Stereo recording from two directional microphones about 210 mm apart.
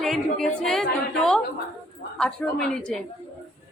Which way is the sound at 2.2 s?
5° left (ahead or behind).